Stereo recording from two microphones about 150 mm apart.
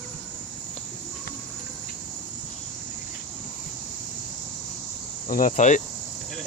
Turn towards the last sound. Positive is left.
turn(degrees=55)  # may be behind; listen again after turning